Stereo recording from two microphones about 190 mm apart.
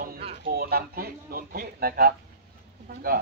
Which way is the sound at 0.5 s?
55° right (ahead or behind).